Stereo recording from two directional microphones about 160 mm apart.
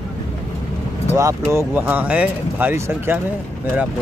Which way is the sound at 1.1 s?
20° right (ahead or behind).